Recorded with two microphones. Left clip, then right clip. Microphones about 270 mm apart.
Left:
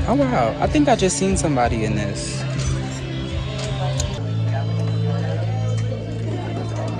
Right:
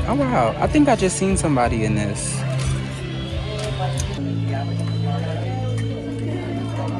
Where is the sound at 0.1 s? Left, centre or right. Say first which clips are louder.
Left 1 dB; centre.